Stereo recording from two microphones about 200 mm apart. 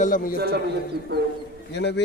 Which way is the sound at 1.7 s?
60° left (ahead or behind).